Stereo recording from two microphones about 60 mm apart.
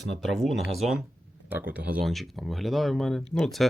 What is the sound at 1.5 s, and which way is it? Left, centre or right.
Speech, right.